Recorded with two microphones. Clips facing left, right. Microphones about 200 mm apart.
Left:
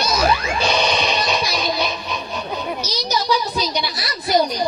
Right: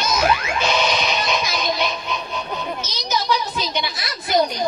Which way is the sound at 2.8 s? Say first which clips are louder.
Left 4 dB; 35° left (ahead or behind).